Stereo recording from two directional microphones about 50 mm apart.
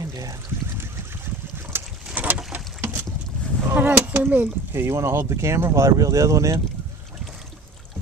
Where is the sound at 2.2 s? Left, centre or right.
Right.